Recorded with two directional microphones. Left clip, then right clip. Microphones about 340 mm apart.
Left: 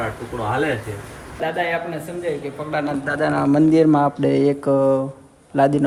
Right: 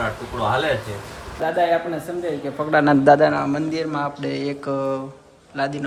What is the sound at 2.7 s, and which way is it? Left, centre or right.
Speech, right.